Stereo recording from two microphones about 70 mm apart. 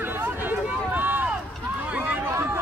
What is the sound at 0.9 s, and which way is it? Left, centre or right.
Run, right.